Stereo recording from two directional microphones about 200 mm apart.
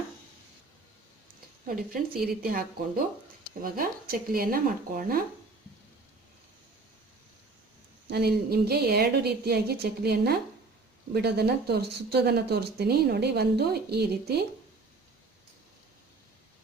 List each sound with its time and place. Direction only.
1.6 s speech: 45° right (ahead or behind)
8.0 s speech: 55° right (ahead or behind)